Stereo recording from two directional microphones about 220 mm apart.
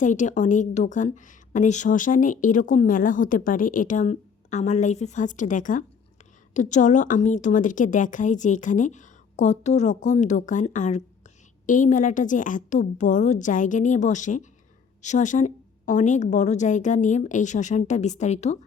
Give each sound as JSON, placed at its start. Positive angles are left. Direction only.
{"t": 0.0, "sound": "a woman's voice", "side_deg": 35}